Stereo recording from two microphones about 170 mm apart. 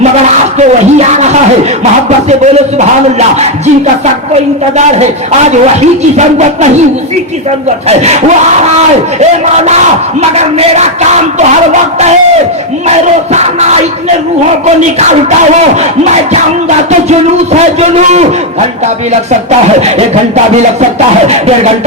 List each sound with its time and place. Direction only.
0.0 s a man's voice: 40° right (ahead or behind)
7.9 s speech: 40° right (ahead or behind)
9.6 s speech: 40° right (ahead or behind)
13.3 s speech: 40° right (ahead or behind)
16.3 s speech: 40° right (ahead or behind)
19.5 s speech: 40° right (ahead or behind)